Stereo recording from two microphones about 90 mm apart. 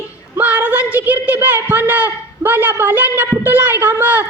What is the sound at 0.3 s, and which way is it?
A man's voice, 15° right (ahead or behind).